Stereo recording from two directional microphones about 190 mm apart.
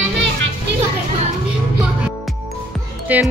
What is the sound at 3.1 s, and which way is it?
Speech, 10° right (ahead or behind).